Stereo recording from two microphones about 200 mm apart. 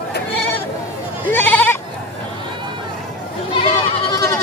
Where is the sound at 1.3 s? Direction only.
10° left (ahead or behind).